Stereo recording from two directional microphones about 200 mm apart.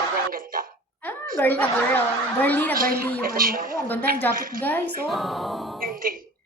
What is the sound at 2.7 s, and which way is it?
Speech, 45° right (ahead or behind).